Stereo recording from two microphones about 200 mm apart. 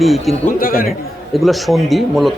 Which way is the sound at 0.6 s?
45° left (ahead or behind).